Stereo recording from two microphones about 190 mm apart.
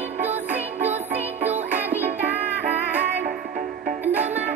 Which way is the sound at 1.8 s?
10° right (ahead or behind).